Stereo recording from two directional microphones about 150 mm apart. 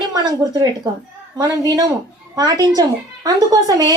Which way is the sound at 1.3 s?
25° right (ahead or behind).